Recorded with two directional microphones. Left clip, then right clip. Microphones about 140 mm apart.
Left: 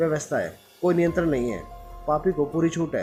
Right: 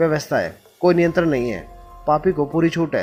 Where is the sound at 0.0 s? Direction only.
45° right (ahead or behind).